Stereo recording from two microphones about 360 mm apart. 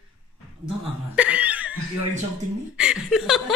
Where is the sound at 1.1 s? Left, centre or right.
Centre.